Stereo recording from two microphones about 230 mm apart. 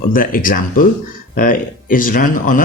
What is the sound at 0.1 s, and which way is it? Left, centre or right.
Speech, left.